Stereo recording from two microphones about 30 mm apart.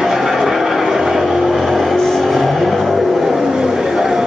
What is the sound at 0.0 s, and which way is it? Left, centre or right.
Vehicle, centre.